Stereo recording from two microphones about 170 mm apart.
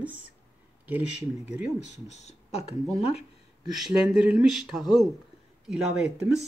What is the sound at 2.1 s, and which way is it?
Speech, 40° left (ahead or behind).